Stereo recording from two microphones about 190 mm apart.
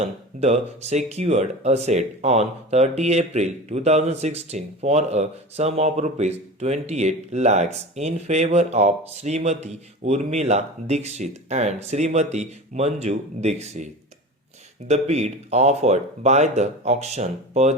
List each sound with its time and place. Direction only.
0.0 s speech: 35° right (ahead or behind)
14.8 s speech: 35° right (ahead or behind)